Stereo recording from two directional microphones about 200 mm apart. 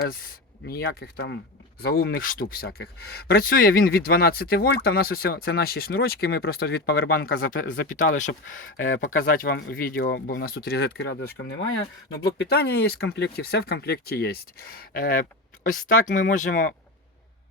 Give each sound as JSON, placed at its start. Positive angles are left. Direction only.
{"t": 0.0, "sound": "speech", "side_deg": 50}